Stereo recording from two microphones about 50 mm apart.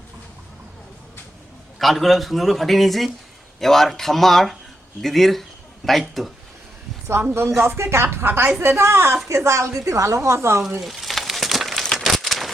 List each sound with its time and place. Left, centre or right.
1.8 s a man's voice: centre
7.6 s a woman's voice: right
8.1 s a woman's voice: right
8.6 s a woman's voice: right
9.3 s a woman's voice: right
9.7 s a woman's voice: right
10.2 s a woman's voice: right
10.8 s a sound: centre